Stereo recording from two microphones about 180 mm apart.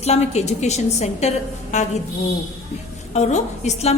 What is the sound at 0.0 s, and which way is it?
A woman's voice, 35° left (ahead or behind).